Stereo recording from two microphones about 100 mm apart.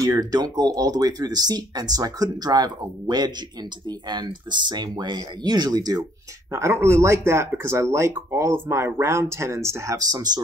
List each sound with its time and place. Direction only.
0.0 s speech: 40° right (ahead or behind)
6.5 s speech: 25° right (ahead or behind)